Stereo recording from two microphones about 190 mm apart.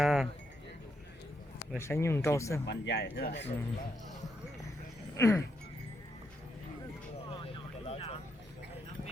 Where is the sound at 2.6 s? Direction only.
65° left (ahead or behind).